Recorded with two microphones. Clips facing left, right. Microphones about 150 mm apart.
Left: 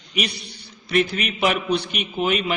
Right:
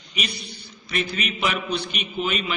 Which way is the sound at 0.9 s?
55° left (ahead or behind).